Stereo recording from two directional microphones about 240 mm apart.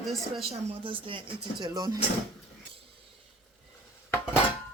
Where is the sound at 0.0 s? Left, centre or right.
Centre.